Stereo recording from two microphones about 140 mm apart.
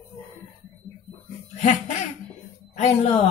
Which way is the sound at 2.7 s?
50° left (ahead or behind).